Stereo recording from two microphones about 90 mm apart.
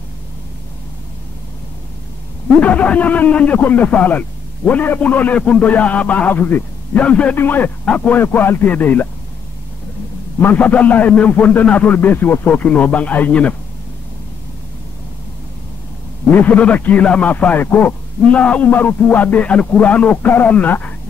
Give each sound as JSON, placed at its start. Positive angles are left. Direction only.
{"t": 2.6, "sound": "a man's voice", "side_deg": 15}
{"t": 10.4, "sound": "a man's voice", "side_deg": 20}
{"t": 16.3, "sound": "a man's voice", "side_deg": 20}